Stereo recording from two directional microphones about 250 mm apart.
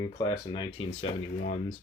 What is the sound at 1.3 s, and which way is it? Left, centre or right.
Speech, left.